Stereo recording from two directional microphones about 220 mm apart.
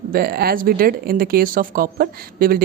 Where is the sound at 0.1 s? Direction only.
45° right (ahead or behind).